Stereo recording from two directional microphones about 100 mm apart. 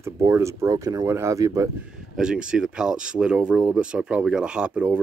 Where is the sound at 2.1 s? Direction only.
10° right (ahead or behind).